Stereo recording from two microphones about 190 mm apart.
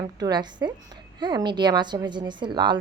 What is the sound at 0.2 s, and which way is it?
A woman's voice, 20° right (ahead or behind).